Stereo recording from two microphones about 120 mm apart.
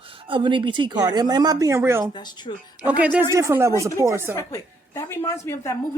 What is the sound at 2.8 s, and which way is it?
Speech, 10° right (ahead or behind).